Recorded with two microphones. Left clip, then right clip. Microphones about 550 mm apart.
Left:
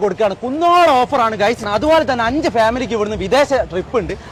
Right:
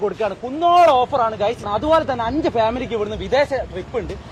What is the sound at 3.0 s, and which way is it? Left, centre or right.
Speech, left.